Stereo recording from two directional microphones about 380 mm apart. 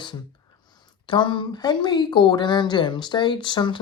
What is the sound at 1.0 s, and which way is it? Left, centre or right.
A woman's voice, centre.